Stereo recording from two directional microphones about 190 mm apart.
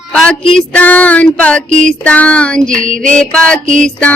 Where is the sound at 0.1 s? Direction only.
5° left (ahead or behind).